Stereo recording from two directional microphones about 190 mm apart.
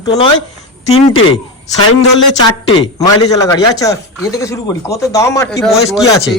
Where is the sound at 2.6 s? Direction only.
20° left (ahead or behind).